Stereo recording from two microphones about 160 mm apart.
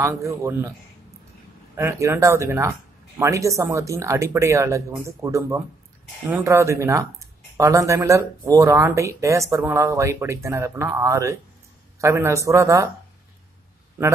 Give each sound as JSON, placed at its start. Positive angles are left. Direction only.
{"t": 0.0, "sound": "speech", "side_deg": -20}
{"t": 1.8, "sound": "speech", "side_deg": -15}